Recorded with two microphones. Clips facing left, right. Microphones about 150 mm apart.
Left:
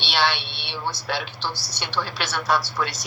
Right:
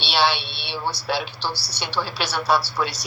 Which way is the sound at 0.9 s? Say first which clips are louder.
Right 3 dB; 35° right (ahead or behind).